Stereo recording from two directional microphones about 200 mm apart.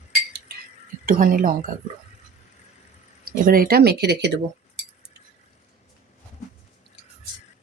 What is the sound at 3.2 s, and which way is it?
Speech, 45° right (ahead or behind).